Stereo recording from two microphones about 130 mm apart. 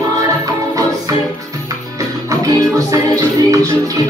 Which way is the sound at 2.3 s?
25° right (ahead or behind).